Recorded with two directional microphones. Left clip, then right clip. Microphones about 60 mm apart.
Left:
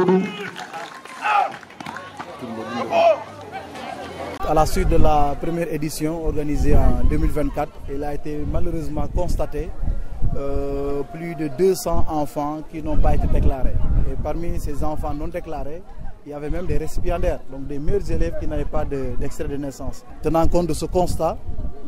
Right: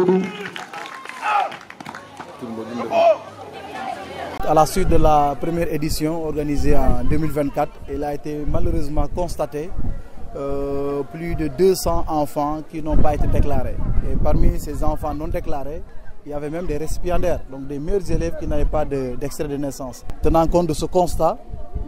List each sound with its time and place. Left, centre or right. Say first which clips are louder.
0.0 s run: even; centre
4.5 s a man's voice: right 3 dB; right
13.3 s speech: right 3 dB; right
14.2 s a man's voice: right 5 dB; right
20.2 s speech: right 3 dB; centre